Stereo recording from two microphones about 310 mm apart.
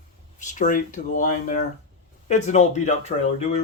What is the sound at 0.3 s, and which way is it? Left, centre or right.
Speech, left.